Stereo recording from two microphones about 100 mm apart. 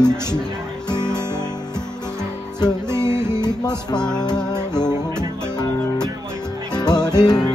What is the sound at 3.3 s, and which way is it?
Music, 45° left (ahead or behind).